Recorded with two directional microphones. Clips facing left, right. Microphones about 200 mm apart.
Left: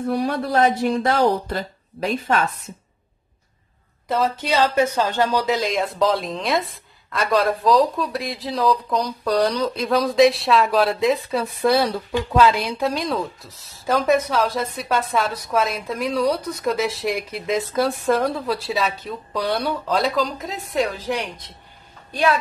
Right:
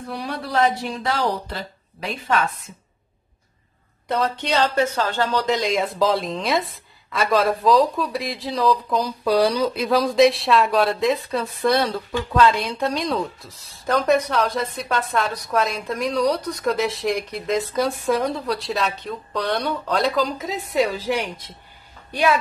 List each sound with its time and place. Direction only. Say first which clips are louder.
0.1 s speech: left 4 dB; 50° left (ahead or behind)
4.1 s a woman's voice: left 1 dB; centre (ahead or behind)
4.6 s speech: left 2 dB; 15° left (ahead or behind)
5.5 s a woman's voice: even; centre (ahead or behind)